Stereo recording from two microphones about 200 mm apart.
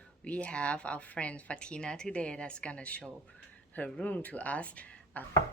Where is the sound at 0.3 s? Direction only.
5° left (ahead or behind).